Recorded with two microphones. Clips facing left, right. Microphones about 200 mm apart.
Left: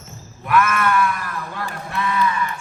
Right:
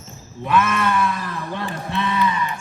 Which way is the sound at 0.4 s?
20° right (ahead or behind).